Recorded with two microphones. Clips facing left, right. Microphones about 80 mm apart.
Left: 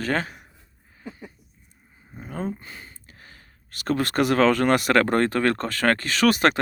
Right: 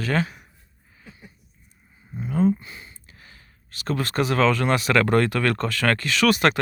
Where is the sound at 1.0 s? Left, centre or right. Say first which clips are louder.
Left 9 dB; left.